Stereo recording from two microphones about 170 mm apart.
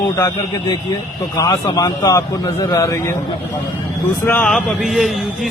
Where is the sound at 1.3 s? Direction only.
20° left (ahead or behind).